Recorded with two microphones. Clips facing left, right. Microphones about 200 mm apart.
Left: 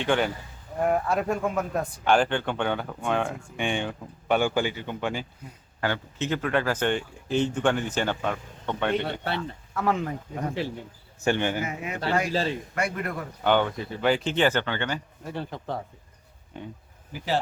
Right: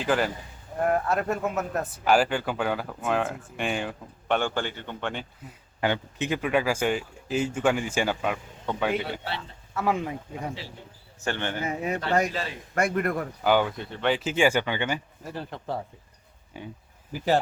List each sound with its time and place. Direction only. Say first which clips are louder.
0.0 s speech: left 1 dB; 5° right (ahead or behind)
5.8 s speech: right 2 dB; 15° right (ahead or behind)
11.2 s speech: left 5 dB; 15° left (ahead or behind)
11.6 s a man's voice: right 4 dB; 35° right (ahead or behind)
12.3 s a man's voice: left 6 dB; 30° left (ahead or behind)
12.7 s a man's voice: right 4 dB; 50° right (ahead or behind)
13.4 s speech: left 1 dB; 5° right (ahead or behind)
15.2 s speech: left 2 dB; centre (ahead or behind)